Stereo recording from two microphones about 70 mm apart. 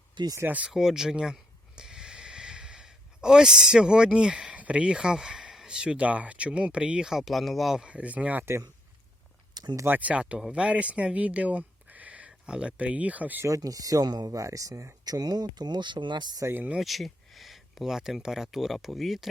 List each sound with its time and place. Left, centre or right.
0.4 s speech: right
0.7 s speech: centre
7.9 s speech: centre
9.8 s speech: right
13.6 s speech: right
14.4 s speech: right
16.7 s speech: centre